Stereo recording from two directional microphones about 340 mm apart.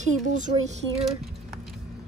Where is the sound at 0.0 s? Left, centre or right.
Right.